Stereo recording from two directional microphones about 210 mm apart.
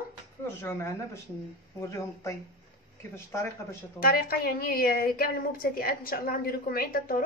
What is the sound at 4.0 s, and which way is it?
A woman's voice, 45° left (ahead or behind).